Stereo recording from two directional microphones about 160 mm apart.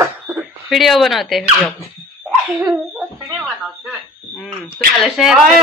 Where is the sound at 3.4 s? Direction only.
5° left (ahead or behind).